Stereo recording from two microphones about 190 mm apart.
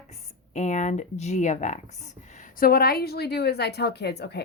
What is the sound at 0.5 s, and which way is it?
A woman's voice, 40° left (ahead or behind).